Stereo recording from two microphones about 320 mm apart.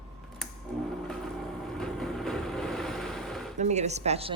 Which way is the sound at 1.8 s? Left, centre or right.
Centre.